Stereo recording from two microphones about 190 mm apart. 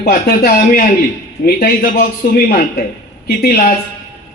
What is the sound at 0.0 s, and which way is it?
A man's voice, 50° left (ahead or behind).